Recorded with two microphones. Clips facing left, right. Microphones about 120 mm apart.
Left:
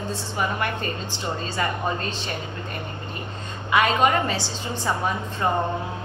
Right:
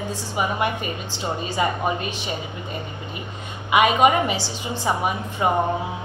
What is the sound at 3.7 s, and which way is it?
A woman's voice, 15° right (ahead or behind).